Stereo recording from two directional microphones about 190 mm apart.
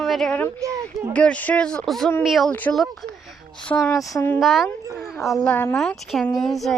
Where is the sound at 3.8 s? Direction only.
20° left (ahead or behind).